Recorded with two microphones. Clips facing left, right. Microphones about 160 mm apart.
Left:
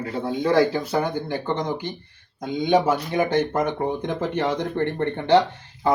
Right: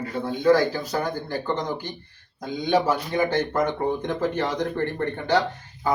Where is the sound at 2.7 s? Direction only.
20° left (ahead or behind).